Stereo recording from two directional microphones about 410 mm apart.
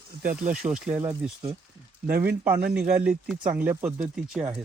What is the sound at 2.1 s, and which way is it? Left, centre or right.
Speech, right.